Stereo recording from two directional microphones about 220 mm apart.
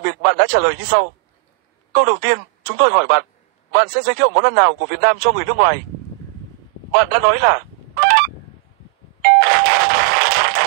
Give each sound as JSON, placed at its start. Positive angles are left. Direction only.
{"t": 0.0, "sound": "speech", "side_deg": -50}
{"t": 6.9, "sound": "honk", "side_deg": -45}
{"t": 9.2, "sound": "doorbell", "side_deg": -40}